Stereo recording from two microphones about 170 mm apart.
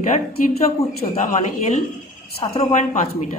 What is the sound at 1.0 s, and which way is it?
Speech, 55° left (ahead or behind).